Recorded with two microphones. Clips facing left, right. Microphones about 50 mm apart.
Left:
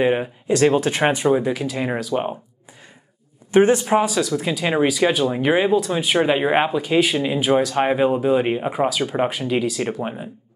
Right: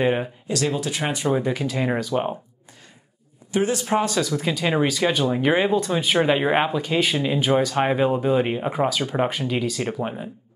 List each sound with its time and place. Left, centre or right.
0.0 s speech: centre
0.5 s speech: left
1.3 s speech: centre
3.5 s speech: left
3.8 s speech: centre